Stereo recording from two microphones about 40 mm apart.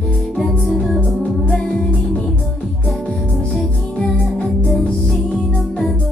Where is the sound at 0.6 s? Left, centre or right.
Centre.